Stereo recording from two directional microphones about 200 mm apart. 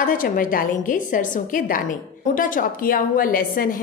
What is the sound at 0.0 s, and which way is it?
A woman's voice, 45° left (ahead or behind).